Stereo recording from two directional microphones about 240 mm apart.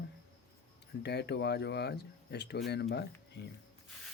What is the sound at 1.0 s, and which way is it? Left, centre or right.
Speech, left.